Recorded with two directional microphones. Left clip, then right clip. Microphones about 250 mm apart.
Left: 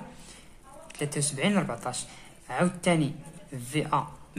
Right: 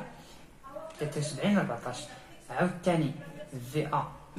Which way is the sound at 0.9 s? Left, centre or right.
Left.